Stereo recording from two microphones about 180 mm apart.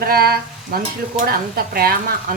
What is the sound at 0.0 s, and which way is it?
Speech, 55° right (ahead or behind).